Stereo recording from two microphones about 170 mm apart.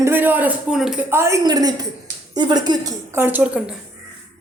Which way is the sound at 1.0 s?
15° right (ahead or behind).